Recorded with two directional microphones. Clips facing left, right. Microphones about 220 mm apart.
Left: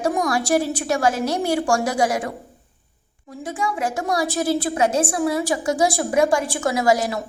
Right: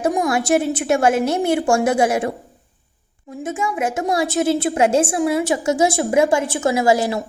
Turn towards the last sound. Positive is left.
turn(degrees=-25)  # may be behind; listen again after turning